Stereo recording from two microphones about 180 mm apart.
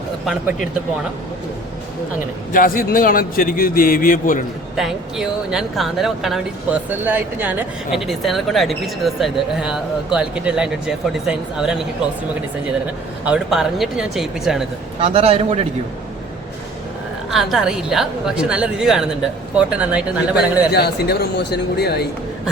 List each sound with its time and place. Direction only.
2.5 s a man's voice: 50° left (ahead or behind)
4.8 s speech: centre (ahead or behind)
13.2 s speech: 5° right (ahead or behind)
15.0 s a man's voice: 35° right (ahead or behind)
17.3 s speech: centre (ahead or behind)
20.7 s speech: 65° left (ahead or behind)